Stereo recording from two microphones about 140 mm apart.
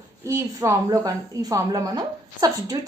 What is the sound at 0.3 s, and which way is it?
A woman's voice, 25° right (ahead or behind).